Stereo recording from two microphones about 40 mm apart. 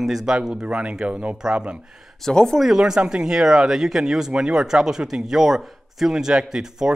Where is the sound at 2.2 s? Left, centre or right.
Centre.